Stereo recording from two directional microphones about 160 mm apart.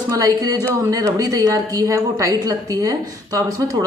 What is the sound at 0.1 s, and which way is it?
A woman's voice, 25° right (ahead or behind).